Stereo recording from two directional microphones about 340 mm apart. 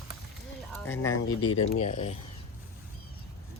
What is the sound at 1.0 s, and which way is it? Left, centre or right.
Speech, left.